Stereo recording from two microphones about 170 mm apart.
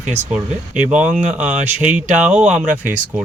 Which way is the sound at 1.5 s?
45° right (ahead or behind).